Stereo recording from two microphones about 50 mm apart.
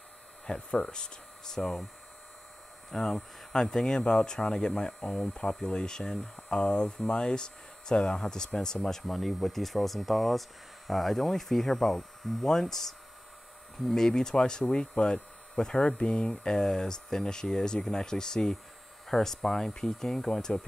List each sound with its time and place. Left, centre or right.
0.5 s speech: centre
2.9 s speech: centre
5.0 s speech: left
5.3 s speech: centre